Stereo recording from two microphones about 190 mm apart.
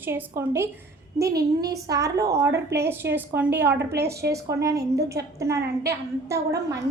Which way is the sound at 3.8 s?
60° right (ahead or behind).